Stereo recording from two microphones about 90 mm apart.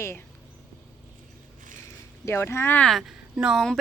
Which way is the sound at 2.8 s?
5° left (ahead or behind).